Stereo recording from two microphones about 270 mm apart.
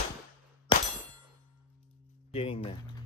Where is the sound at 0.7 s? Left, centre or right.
Centre.